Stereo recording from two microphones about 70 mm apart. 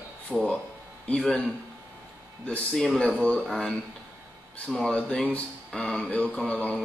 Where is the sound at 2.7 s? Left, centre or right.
Centre.